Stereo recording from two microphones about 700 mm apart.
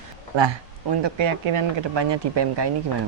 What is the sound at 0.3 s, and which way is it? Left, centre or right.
Speech, right.